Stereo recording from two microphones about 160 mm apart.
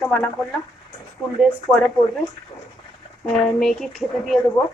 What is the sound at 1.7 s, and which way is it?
Speech, 15° left (ahead or behind).